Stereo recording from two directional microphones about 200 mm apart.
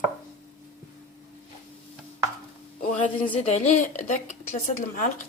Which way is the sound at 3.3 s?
35° left (ahead or behind).